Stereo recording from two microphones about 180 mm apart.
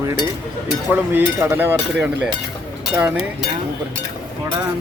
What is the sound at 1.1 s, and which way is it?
Speech, 15° right (ahead or behind).